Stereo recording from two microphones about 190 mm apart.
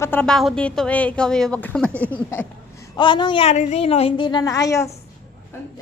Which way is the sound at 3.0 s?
25° left (ahead or behind).